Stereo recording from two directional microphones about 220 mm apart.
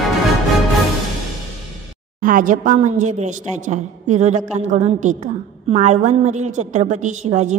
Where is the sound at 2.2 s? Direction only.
40° right (ahead or behind).